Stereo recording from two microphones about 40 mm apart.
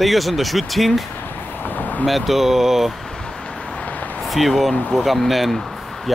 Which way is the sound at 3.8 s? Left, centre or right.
Left.